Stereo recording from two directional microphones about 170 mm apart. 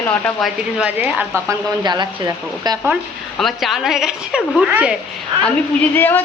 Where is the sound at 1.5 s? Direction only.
25° right (ahead or behind).